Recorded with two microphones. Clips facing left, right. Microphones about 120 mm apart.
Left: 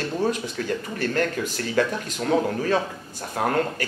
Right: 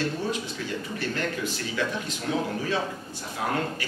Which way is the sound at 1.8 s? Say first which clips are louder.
Left 7 dB; 50° left (ahead or behind).